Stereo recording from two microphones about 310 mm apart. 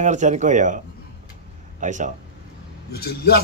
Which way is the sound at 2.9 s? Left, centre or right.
Left.